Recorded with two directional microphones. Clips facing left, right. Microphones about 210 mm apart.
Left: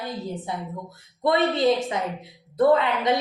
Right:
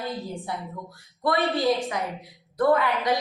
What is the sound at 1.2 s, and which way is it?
A woman's voice, 20° left (ahead or behind).